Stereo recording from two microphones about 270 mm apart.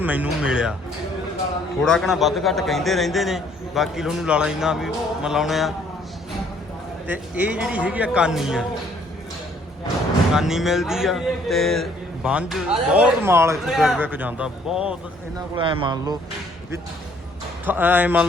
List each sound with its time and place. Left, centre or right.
0.0 s a man's voice: centre
1.8 s a man's voice: centre
7.1 s a man's voice: centre
10.3 s a man's voice: centre
15.4 s speech: centre
17.7 s speech: centre